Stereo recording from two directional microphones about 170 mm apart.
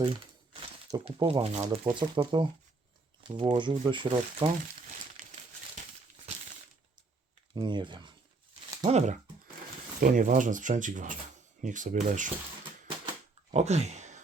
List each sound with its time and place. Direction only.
1.0 s speech: 35° right (ahead or behind)
5.2 s crumpling: 55° right (ahead or behind)
7.5 s speech: 25° right (ahead or behind)
8.9 s speech: 40° right (ahead or behind)
13.5 s speech: 40° right (ahead or behind)